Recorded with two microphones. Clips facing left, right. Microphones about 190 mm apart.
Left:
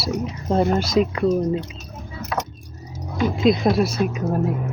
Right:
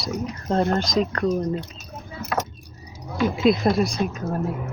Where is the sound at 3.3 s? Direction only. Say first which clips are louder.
Left 2 dB; 5° right (ahead or behind).